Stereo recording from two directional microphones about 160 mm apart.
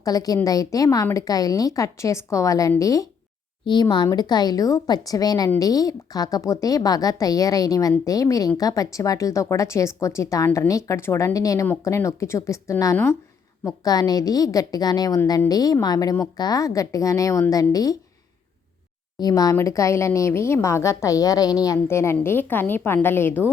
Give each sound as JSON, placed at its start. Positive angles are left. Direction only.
{"t": 0.0, "sound": "a woman's voice", "side_deg": 25}
{"t": 19.2, "sound": "a woman's voice", "side_deg": 20}